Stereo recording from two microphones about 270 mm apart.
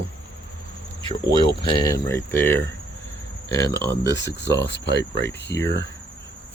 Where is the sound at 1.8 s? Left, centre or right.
Centre.